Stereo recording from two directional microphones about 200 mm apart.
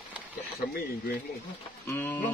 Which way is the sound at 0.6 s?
50° left (ahead or behind).